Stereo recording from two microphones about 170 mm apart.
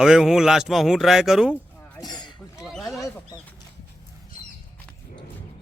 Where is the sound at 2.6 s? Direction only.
Centre (ahead or behind).